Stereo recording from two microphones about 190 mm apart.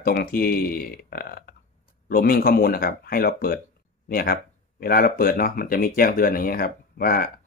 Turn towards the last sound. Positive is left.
turn(degrees=50)  # may be behind; listen again after turning